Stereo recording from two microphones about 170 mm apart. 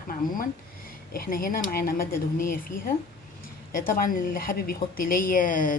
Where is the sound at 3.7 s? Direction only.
55° left (ahead or behind).